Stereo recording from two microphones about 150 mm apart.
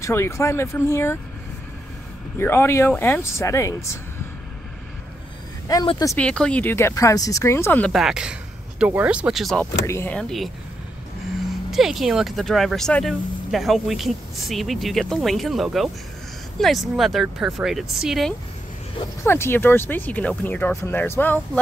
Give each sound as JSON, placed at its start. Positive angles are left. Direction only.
{"t": 0.0, "sound": "speech", "side_deg": 20}
{"t": 2.3, "sound": "speech", "side_deg": 15}
{"t": 6.1, "sound": "speech", "side_deg": 5}
{"t": 7.9, "sound": "speech", "side_deg": -5}
{"t": 9.6, "sound": "speech", "side_deg": 15}
{"t": 10.1, "sound": "speech", "side_deg": 0}
{"t": 11.7, "sound": "speech", "side_deg": 0}
{"t": 19.2, "sound": "speech", "side_deg": 15}